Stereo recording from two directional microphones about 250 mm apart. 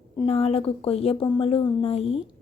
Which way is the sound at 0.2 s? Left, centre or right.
Left.